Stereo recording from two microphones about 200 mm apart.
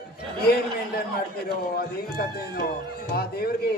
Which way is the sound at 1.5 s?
50° left (ahead or behind).